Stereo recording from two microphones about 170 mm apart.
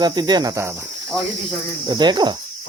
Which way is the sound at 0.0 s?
25° right (ahead or behind).